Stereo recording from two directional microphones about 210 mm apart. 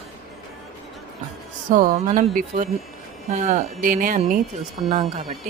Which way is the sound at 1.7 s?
35° right (ahead or behind).